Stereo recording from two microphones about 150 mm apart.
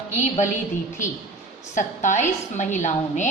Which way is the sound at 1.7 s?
55° left (ahead or behind).